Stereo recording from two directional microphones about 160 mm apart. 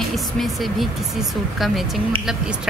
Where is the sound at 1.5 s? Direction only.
Centre (ahead or behind).